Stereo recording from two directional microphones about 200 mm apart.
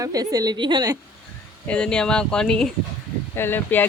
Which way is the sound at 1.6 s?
5° left (ahead or behind).